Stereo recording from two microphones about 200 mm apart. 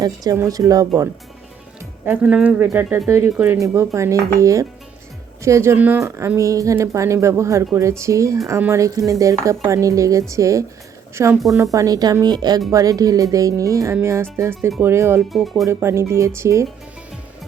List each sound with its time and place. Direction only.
0.0 s speech: 20° right (ahead or behind)
15.3 s speech: centre (ahead or behind)
15.6 s speech: 15° right (ahead or behind)